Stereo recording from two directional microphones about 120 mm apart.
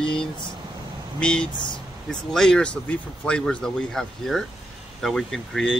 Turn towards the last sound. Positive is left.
turn(degrees=5)  # may be behind; listen again after turning